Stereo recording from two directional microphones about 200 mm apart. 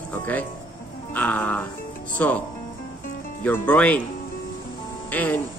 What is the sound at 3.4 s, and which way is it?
Speech, 10° left (ahead or behind).